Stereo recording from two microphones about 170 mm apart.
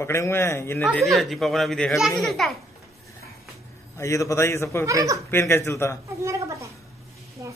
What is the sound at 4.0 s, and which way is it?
Speech, 20° left (ahead or behind).